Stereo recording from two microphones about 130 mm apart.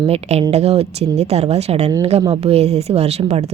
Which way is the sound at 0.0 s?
50° right (ahead or behind).